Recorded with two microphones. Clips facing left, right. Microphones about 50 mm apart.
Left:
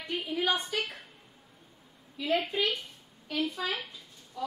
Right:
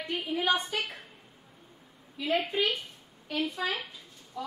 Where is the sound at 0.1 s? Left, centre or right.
Centre.